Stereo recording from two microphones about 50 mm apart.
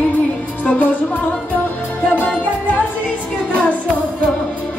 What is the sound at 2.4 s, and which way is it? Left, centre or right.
Music, left.